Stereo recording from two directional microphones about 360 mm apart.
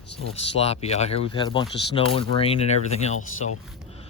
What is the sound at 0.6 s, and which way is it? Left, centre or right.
Speech, centre.